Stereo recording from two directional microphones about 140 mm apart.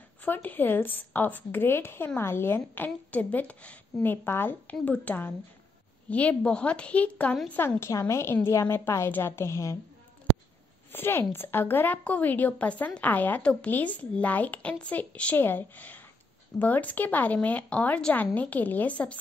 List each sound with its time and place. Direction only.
0.2 s a woman's voice: 10° left (ahead or behind)
10.9 s a woman's voice: 15° left (ahead or behind)